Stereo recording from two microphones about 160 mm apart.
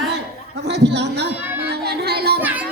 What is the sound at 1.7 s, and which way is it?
Child singing, 85° right.